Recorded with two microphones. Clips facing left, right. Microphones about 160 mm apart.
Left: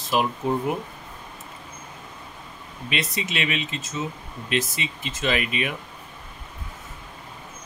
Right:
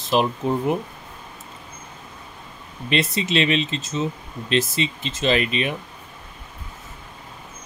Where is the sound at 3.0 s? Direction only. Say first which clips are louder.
Right 7 dB; 30° right (ahead or behind).